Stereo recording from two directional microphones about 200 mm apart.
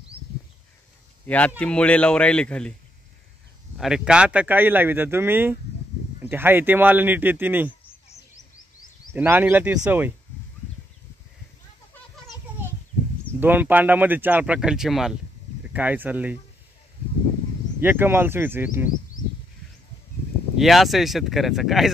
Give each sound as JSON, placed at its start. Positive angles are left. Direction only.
{"t": 1.2, "sound": "speech", "side_deg": 5}
{"t": 3.7, "sound": "speech", "side_deg": 0}
{"t": 9.1, "sound": "speech", "side_deg": -10}
{"t": 13.4, "sound": "speech", "side_deg": -10}
{"t": 17.7, "sound": "speech", "side_deg": -10}
{"t": 20.5, "sound": "speech", "side_deg": 0}